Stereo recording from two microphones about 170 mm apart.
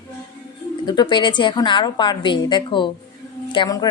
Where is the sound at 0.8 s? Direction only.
25° left (ahead or behind).